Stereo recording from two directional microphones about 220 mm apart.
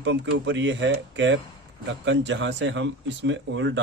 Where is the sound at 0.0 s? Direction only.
55° right (ahead or behind).